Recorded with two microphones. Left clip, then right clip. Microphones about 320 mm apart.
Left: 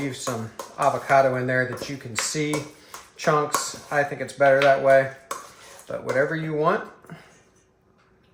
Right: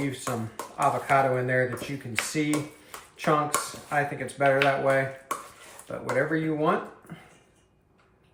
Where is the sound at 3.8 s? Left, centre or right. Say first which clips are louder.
Left 4 dB; centre.